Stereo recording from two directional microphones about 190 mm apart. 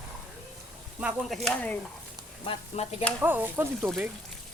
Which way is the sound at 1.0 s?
5° right (ahead or behind).